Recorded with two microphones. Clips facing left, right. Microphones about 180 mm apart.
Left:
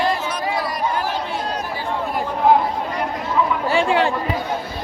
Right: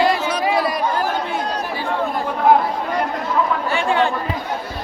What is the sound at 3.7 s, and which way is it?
Chatter, 30° left (ahead or behind).